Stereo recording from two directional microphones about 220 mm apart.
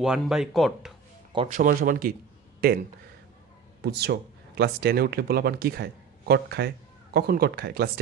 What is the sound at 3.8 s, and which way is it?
Speech, 45° right (ahead or behind).